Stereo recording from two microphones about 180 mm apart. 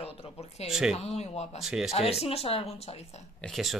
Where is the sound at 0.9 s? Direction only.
35° left (ahead or behind).